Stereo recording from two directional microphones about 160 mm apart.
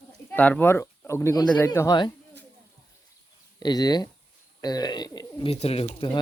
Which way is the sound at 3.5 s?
25° left (ahead or behind).